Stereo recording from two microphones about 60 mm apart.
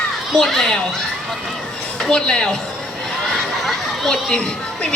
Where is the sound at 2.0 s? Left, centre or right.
Centre.